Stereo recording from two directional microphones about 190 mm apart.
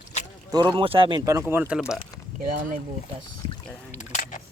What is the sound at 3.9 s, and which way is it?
Single-lens reflex camera, 40° left (ahead or behind).